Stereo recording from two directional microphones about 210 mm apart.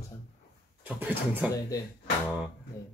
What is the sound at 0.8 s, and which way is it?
Speech, 5° right (ahead or behind).